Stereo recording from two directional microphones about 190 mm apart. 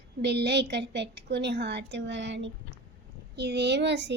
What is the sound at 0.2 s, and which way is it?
A woman's voice, 60° right (ahead or behind).